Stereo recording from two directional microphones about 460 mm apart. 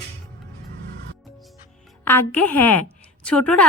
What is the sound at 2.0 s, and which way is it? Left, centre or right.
A woman's voice, centre.